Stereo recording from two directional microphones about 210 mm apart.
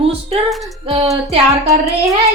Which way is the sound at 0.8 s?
30° right (ahead or behind).